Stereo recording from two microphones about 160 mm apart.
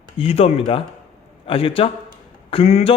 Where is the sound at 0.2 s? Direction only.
40° left (ahead or behind).